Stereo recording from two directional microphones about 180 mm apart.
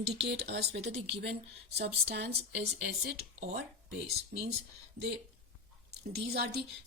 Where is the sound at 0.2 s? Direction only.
65° right (ahead or behind).